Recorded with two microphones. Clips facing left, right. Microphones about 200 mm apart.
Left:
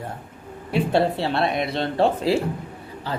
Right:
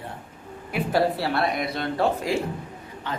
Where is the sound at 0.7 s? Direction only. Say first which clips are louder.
Left 2 dB; 25° left (ahead or behind).